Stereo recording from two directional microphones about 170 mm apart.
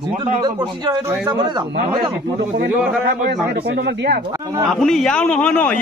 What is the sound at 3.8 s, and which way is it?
Speech, 75° right (ahead or behind).